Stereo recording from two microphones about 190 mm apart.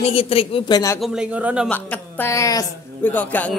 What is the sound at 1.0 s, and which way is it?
Speech, 5° right (ahead or behind).